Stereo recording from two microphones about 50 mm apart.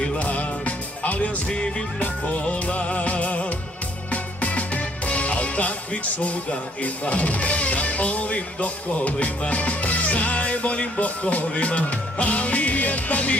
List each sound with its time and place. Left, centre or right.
0.0 s music: left